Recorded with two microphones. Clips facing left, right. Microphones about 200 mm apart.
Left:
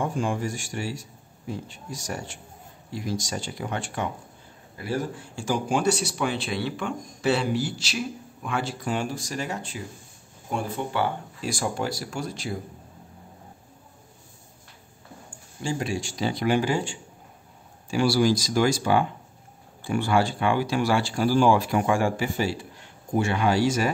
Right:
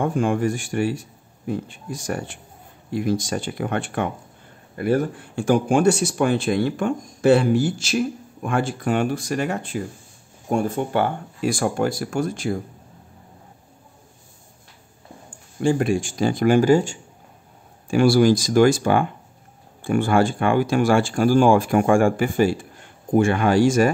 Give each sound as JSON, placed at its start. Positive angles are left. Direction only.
{"t": 0.0, "sound": "speech", "side_deg": -60}
{"t": 15.6, "sound": "speech", "side_deg": -55}